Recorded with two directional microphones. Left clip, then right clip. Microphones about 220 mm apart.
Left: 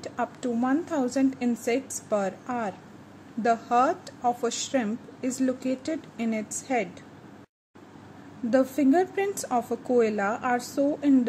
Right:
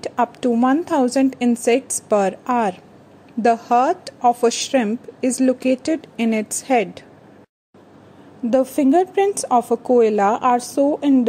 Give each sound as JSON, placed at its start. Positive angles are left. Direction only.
{"t": 0.0, "sound": "a woman's voice", "side_deg": -35}
{"t": 8.5, "sound": "speech", "side_deg": -30}